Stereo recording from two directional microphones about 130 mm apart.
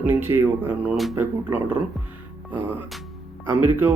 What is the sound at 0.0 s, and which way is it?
Speech, 15° right (ahead or behind).